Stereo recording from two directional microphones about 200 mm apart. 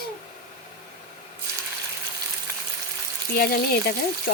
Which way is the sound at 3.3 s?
50° left (ahead or behind).